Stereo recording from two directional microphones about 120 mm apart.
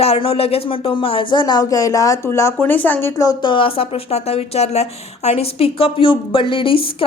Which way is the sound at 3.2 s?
30° left (ahead or behind).